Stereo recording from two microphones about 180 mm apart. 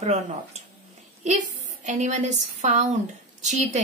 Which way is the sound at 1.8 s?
40° right (ahead or behind).